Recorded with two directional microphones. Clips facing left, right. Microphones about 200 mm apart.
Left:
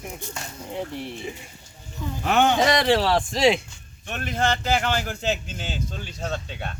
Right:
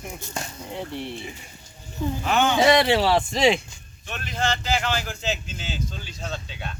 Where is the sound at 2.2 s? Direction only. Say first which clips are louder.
Left 3 dB; 55° left (ahead or behind).